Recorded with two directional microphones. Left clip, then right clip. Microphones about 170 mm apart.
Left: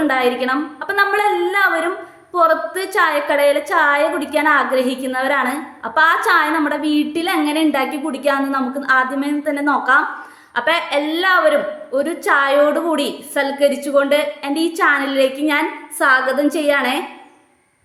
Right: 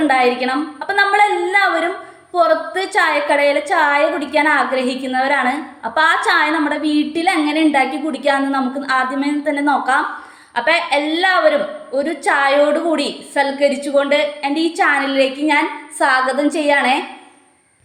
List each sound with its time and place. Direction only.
0.1 s a woman's voice: 5° left (ahead or behind)